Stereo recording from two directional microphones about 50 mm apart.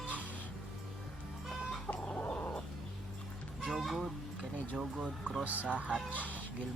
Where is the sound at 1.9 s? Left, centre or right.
Left.